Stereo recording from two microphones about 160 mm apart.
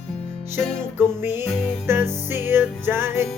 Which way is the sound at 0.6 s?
5° left (ahead or behind).